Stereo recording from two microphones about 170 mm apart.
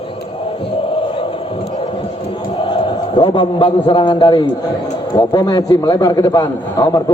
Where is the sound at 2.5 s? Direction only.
30° left (ahead or behind).